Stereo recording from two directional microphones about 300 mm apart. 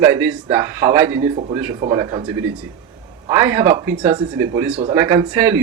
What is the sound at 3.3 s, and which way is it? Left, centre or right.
Speech, centre.